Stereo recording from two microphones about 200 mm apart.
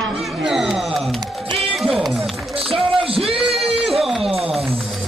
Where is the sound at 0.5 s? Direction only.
Centre (ahead or behind).